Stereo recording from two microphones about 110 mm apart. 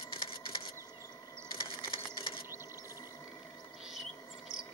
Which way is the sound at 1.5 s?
55° left (ahead or behind).